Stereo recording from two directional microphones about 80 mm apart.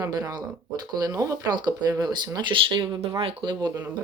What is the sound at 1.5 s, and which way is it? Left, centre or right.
Speech, right.